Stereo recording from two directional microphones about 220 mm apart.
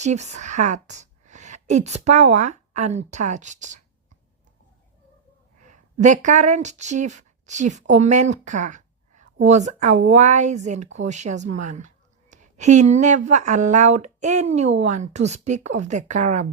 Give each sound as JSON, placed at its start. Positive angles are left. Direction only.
{"t": 0.0, "sound": "a woman's voice", "side_deg": -30}
{"t": 5.6, "sound": "speech", "side_deg": -35}